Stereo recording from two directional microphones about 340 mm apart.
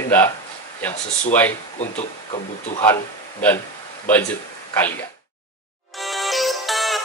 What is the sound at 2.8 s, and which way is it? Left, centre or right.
Speech, centre.